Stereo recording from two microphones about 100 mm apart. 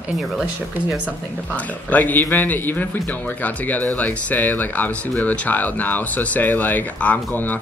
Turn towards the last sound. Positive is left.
turn(degrees=15)  # may be behind; listen again after turning